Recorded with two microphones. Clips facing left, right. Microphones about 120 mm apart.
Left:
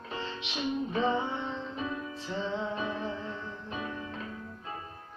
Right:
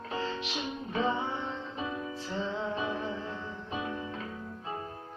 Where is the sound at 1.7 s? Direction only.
20° right (ahead or behind).